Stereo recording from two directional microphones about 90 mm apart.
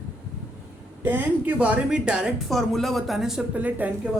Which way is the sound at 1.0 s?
20° right (ahead or behind).